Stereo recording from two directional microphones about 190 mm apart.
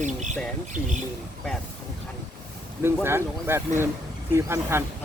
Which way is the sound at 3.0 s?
10° right (ahead or behind).